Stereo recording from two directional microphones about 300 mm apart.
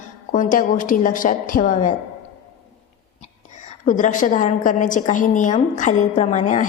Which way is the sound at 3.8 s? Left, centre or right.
Left.